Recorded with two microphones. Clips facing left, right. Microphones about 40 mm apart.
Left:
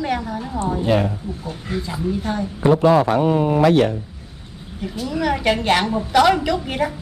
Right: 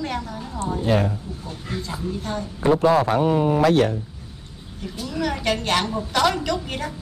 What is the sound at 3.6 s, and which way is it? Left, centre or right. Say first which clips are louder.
Speech: left 3 dB; left.